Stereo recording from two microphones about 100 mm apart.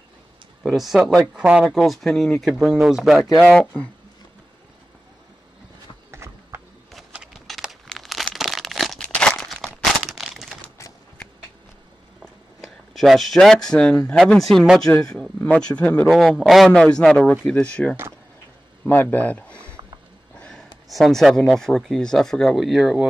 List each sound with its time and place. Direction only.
0.7 s speech: centre (ahead or behind)
1.2 s speech: 10° right (ahead or behind)
1.8 s speech: 5° left (ahead or behind)
3.5 s speech: 15° left (ahead or behind)
6.1 s clip-clop: 25° right (ahead or behind)
6.9 s a sound: 5° right (ahead or behind)
7.3 s crumpling: centre (ahead or behind)
12.2 s a sound: centre (ahead or behind)
14.2 s speech: 5° left (ahead or behind)
16.1 s speech: 5° left (ahead or behind)
20.3 s a sound: 10° left (ahead or behind)
20.9 s speech: centre (ahead or behind)